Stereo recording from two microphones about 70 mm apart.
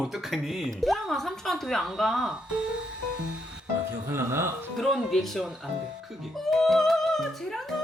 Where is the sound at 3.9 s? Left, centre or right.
Right.